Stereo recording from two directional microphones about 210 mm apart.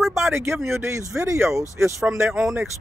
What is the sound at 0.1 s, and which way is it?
Speech, 10° right (ahead or behind).